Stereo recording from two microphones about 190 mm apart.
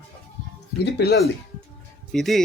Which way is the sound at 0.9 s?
60° left (ahead or behind).